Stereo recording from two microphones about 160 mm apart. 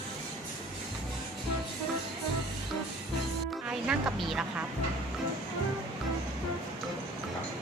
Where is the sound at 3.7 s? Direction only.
5° right (ahead or behind).